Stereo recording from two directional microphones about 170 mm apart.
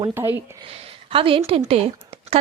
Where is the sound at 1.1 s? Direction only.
30° right (ahead or behind).